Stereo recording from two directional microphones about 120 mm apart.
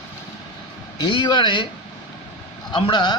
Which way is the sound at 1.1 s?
40° left (ahead or behind).